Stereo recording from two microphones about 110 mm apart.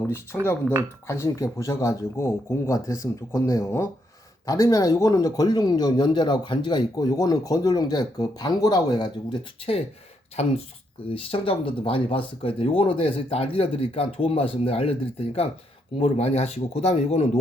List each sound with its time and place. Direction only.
1.0 s speech: 25° left (ahead or behind); by 9.1 s 40° left (ahead or behind)
10.4 s speech: 75° left (ahead or behind)
11.1 s speech: 55° left (ahead or behind); by 17.2 s 85° left